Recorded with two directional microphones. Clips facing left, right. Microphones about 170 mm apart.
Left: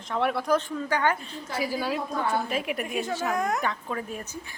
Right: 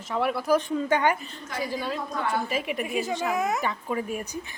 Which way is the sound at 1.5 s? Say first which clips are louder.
Left 2 dB; 10° left (ahead or behind).